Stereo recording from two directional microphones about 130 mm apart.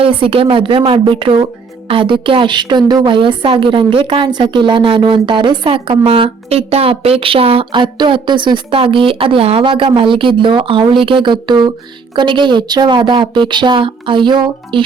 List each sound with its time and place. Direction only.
0.0 s a woman's voice: 45° right (ahead or behind)